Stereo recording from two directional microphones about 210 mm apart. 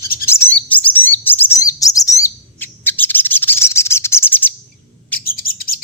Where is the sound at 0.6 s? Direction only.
5° left (ahead or behind).